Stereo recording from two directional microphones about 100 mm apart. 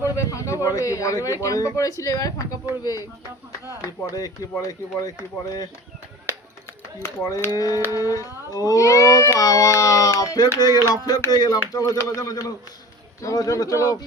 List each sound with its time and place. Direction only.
0.0 s speech: 30° left (ahead or behind)
7.4 s speech: 35° left (ahead or behind)
10.7 s a sound: 35° right (ahead or behind)
10.9 s speech: 40° left (ahead or behind)